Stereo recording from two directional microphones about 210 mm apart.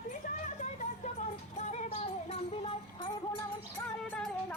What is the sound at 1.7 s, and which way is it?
Music, 30° left (ahead or behind).